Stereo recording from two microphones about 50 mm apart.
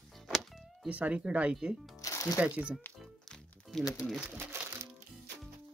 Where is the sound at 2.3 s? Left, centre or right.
Right.